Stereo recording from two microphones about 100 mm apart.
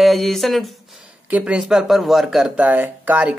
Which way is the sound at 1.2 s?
15° right (ahead or behind).